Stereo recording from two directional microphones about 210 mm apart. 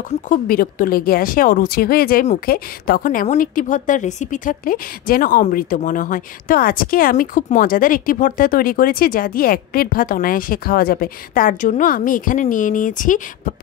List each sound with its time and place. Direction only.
0.3 s speech: 45° left (ahead or behind)